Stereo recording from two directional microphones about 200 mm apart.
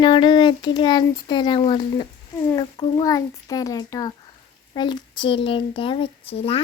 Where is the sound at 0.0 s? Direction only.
25° left (ahead or behind).